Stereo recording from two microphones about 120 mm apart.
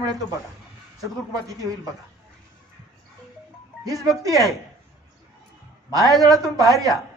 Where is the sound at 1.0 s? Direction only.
30° right (ahead or behind).